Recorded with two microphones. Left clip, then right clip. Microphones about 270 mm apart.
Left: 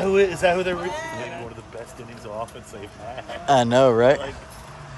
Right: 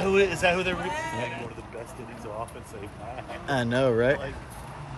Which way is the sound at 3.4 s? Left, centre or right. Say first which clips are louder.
Left 9 dB; centre.